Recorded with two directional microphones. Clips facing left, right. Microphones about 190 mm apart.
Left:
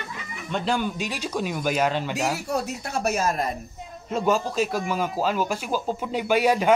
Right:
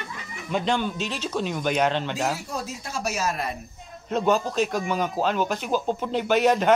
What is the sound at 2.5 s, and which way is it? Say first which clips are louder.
Speech: left 5 dB; 60° left (ahead or behind).